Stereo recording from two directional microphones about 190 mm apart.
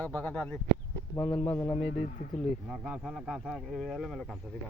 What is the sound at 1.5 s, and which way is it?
Speech, 15° left (ahead or behind).